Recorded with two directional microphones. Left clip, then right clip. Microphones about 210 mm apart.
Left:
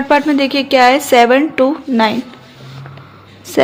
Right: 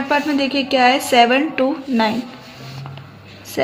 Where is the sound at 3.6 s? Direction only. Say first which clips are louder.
Left 8 dB; 45° left (ahead or behind).